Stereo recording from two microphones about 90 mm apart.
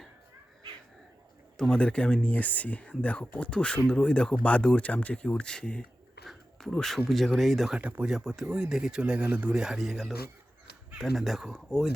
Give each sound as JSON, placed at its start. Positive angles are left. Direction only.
{"t": 1.5, "sound": "speech", "side_deg": 5}
{"t": 6.2, "sound": "a sound", "side_deg": 5}
{"t": 7.1, "sound": "speech", "side_deg": 0}
{"t": 7.8, "sound": "speech", "side_deg": -15}
{"t": 8.1, "sound": "speech", "side_deg": -5}